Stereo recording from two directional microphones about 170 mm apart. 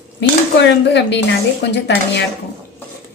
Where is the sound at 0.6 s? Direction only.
90° left.